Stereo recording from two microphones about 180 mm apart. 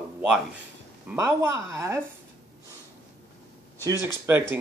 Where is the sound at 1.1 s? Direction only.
15° right (ahead or behind).